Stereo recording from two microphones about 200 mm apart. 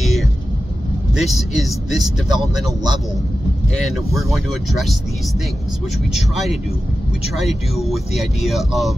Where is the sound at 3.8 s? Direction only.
Centre (ahead or behind).